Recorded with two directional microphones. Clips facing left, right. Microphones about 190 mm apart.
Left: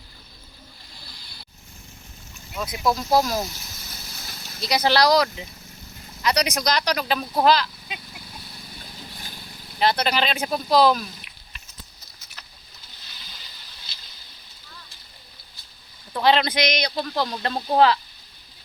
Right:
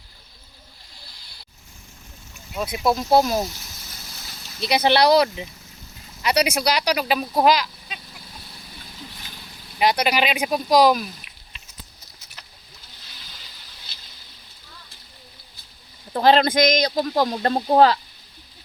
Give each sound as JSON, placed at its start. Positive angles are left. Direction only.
{"t": 2.6, "sound": "speech", "side_deg": -25}
{"t": 4.7, "sound": "speech", "side_deg": -25}
{"t": 6.2, "sound": "speech", "side_deg": -10}
{"t": 9.7, "sound": "speech", "side_deg": -10}
{"t": 16.1, "sound": "speech", "side_deg": -40}